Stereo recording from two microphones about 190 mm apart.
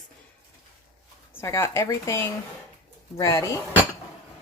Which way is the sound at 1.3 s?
15° left (ahead or behind).